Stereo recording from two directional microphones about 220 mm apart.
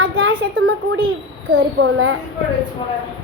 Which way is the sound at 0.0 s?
65° right (ahead or behind).